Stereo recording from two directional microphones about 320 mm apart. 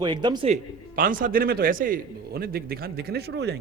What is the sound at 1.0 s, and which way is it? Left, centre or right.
A man's voice, right.